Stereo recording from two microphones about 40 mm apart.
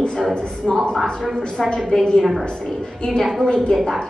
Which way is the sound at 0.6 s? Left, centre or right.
Centre.